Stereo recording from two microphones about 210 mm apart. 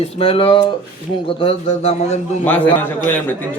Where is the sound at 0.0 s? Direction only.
25° left (ahead or behind).